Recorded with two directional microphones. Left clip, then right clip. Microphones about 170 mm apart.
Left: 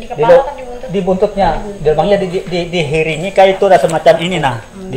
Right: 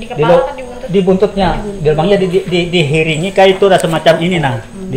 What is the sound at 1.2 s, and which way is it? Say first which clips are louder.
Speech: even; 30° left (ahead or behind).